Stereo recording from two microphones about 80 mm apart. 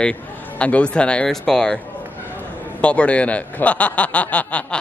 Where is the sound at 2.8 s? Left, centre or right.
Centre.